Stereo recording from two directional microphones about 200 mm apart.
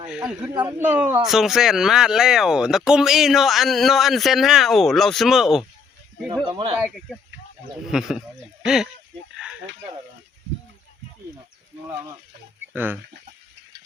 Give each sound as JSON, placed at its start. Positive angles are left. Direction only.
{"t": 0.0, "sound": "speech", "side_deg": -5}
{"t": 6.3, "sound": "a sound", "side_deg": -25}
{"t": 6.8, "sound": "speech", "side_deg": 0}
{"t": 12.7, "sound": "speech", "side_deg": -10}